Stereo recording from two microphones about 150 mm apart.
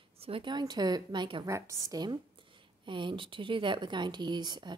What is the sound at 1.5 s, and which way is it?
A woman's voice, 20° right (ahead or behind).